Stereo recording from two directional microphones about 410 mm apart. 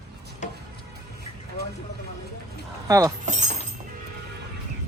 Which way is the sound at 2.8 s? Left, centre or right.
Centre.